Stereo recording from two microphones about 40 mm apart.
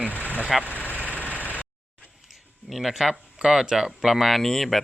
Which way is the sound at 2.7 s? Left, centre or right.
Centre.